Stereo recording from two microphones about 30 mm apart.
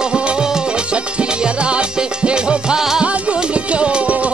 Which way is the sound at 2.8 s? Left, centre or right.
Centre.